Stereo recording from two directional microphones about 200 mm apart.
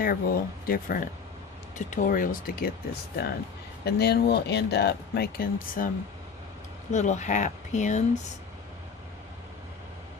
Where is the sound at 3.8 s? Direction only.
55° left (ahead or behind).